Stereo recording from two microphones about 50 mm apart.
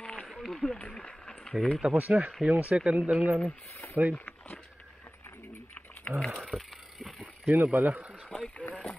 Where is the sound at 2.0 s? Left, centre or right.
Right.